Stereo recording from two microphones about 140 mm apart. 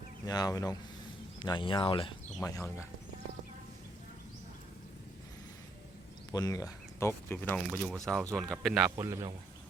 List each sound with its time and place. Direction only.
0.3 s speech: 25° left (ahead or behind)
2.4 s speech: 20° left (ahead or behind)
6.3 s speech: 25° left (ahead or behind); by 8.9 s centre (ahead or behind)
9.0 s a man's voice: 20° right (ahead or behind)